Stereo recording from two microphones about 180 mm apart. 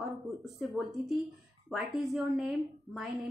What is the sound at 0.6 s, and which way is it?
A woman's voice, centre (ahead or behind).